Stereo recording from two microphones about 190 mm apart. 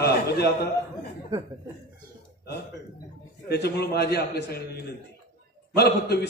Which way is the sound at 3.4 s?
60° left (ahead or behind).